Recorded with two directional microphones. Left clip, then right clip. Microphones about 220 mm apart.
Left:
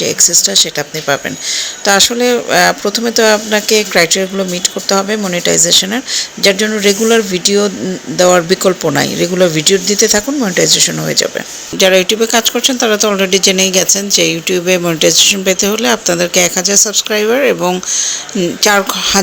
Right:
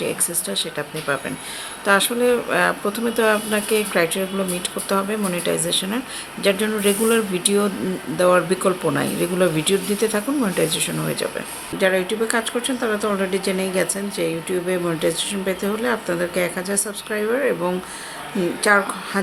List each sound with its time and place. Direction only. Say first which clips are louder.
0.0 s speech: left 14 dB; 25° left (ahead or behind)